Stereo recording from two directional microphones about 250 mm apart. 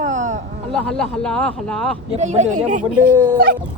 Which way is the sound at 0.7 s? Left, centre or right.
Centre.